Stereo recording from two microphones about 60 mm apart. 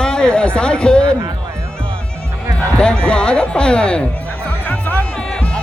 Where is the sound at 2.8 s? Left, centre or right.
Centre.